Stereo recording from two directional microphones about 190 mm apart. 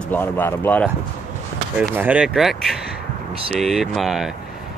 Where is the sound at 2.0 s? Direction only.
5° right (ahead or behind).